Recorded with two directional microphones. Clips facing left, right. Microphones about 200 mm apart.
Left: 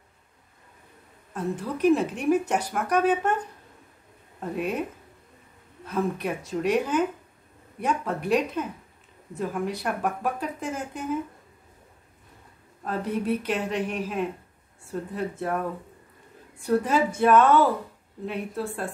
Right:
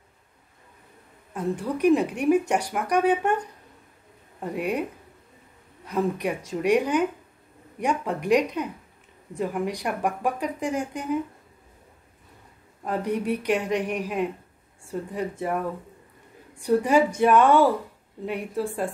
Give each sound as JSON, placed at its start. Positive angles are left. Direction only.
{"t": 1.3, "sound": "speech", "side_deg": -10}
{"t": 5.9, "sound": "speech", "side_deg": -15}
{"t": 12.8, "sound": "speech", "side_deg": -15}
{"t": 16.6, "sound": "speech", "side_deg": -15}